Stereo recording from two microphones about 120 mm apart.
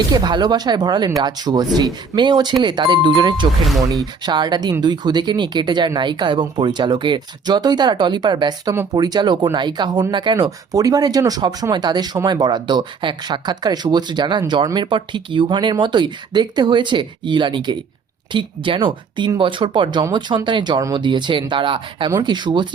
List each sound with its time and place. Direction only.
0.1 s speech: 35° right (ahead or behind)
3.6 s speech: centre (ahead or behind)
4.0 s speech: 35° right (ahead or behind)